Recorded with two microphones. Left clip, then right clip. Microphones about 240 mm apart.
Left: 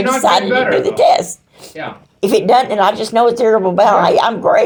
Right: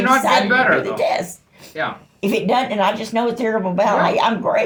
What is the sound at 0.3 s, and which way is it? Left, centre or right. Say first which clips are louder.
A woman's voice: left 2 dB; left.